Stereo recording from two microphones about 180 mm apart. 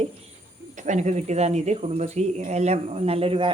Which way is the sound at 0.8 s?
40° right (ahead or behind).